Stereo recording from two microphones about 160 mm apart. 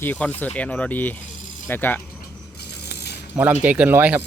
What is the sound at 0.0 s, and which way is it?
Speech, 10° left (ahead or behind).